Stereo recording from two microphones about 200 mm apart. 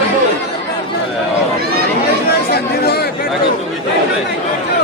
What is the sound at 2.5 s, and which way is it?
Chatter, 55° left (ahead or behind).